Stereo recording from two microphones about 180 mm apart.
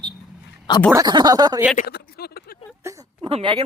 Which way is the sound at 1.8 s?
60° left (ahead or behind).